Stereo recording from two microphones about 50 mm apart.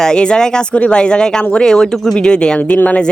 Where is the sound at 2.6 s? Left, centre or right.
Left.